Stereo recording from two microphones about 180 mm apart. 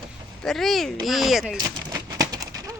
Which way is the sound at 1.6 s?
20° right (ahead or behind).